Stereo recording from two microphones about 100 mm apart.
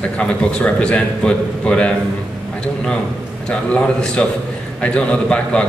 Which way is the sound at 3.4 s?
10° left (ahead or behind).